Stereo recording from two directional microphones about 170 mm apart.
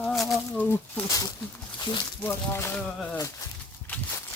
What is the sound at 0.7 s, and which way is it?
Speech, 20° left (ahead or behind).